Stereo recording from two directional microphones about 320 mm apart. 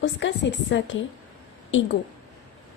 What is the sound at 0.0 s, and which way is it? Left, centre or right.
Speech, left.